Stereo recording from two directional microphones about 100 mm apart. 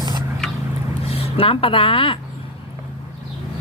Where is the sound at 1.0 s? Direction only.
75° left (ahead or behind).